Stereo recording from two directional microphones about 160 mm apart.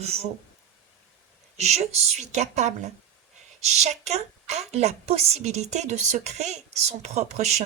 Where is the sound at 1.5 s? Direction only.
45° right (ahead or behind).